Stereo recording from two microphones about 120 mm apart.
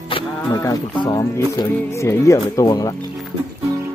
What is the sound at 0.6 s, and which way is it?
Speech, 30° left (ahead or behind).